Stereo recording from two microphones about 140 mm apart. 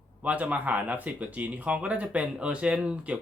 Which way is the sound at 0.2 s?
10° right (ahead or behind).